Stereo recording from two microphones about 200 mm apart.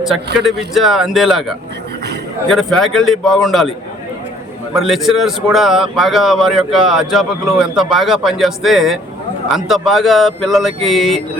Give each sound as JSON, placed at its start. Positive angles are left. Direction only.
{"t": 0.4, "sound": "a man's voice", "side_deg": 0}
{"t": 4.7, "sound": "a man's voice", "side_deg": 0}